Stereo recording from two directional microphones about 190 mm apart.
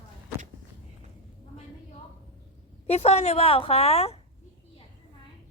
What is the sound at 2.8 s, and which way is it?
A woman's voice, 35° left (ahead or behind).